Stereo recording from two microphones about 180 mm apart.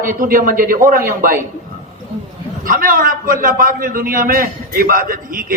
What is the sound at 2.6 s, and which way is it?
A man's voice, 50° right (ahead or behind).